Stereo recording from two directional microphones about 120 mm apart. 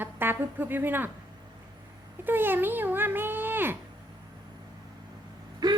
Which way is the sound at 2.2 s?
15° right (ahead or behind).